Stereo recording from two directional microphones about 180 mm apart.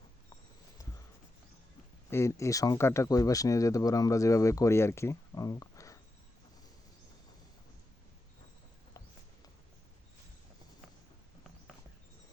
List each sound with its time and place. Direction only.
2.0 s speech: 15° left (ahead or behind)